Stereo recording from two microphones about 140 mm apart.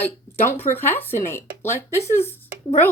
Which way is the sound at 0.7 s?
15° left (ahead or behind).